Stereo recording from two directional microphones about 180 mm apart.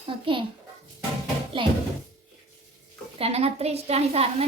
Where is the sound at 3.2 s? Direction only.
35° right (ahead or behind).